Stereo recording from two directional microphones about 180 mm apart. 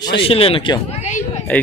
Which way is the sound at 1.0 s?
40° left (ahead or behind).